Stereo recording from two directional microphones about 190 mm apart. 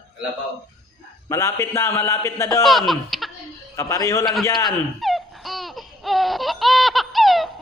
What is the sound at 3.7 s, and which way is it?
Speech, 15° left (ahead or behind).